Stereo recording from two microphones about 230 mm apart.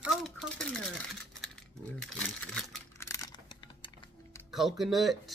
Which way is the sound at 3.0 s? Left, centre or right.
Centre.